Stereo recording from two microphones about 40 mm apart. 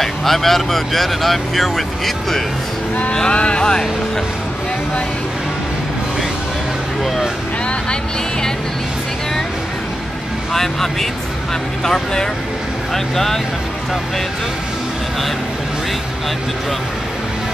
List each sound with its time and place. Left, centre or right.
0.0 s speech: centre
3.1 s speech: left
7.9 s speech: centre
10.5 s speech: centre